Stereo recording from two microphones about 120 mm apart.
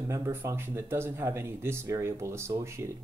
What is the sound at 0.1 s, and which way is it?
Speech, 20° right (ahead or behind).